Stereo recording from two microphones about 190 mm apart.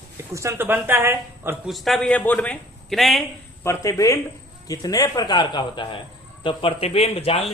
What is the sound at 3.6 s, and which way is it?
A man's voice, 15° left (ahead or behind).